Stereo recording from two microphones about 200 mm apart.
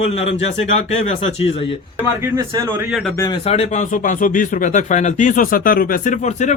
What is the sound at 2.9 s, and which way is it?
Speech, centre (ahead or behind).